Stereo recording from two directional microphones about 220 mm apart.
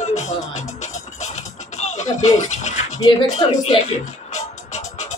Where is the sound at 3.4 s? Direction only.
35° left (ahead or behind).